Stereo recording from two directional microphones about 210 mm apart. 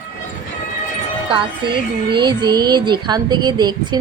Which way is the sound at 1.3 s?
20° right (ahead or behind).